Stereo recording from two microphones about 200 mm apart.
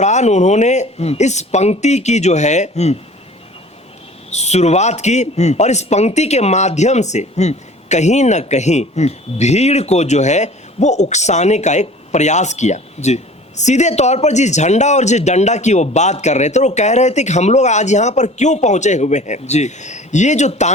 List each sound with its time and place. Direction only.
0.0 s a man's voice: 35° left (ahead or behind)
4.3 s a man's voice: 35° left (ahead or behind)